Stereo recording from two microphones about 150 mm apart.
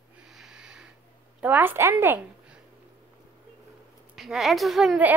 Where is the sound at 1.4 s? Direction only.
10° right (ahead or behind).